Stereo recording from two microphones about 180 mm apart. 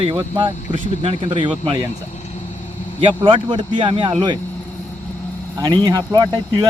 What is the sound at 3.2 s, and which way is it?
Speech, 25° right (ahead or behind).